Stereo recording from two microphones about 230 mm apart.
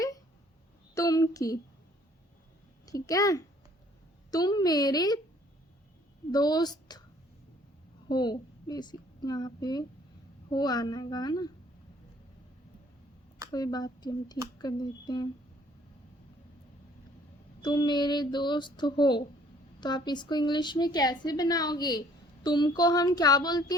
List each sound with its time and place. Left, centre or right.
0.9 s a sound: centre
2.8 s speech: centre
6.3 s speech: centre
8.0 s a woman's voice: centre
13.5 s speech: centre
17.6 s speech: centre